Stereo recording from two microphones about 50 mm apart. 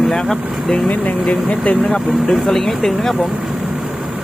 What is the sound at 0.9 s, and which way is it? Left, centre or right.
Speech, left.